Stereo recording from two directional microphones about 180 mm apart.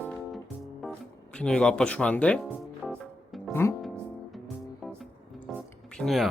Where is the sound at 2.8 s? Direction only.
Centre (ahead or behind).